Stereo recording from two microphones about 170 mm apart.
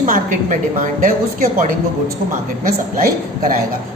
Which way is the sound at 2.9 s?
55° right (ahead or behind).